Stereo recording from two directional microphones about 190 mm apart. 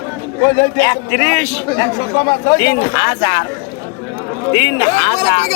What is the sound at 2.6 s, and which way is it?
Speech, 20° left (ahead or behind).